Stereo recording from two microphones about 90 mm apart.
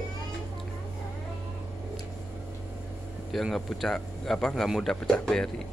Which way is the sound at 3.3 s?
Centre (ahead or behind).